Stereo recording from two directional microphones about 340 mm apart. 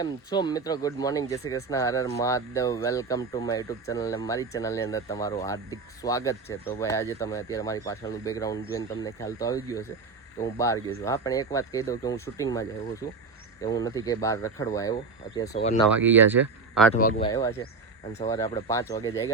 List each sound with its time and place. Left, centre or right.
0.0 s speech: centre
16.0 s speech: centre
16.9 s speech: left